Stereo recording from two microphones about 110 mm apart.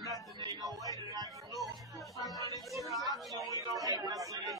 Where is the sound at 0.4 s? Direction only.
35° right (ahead or behind).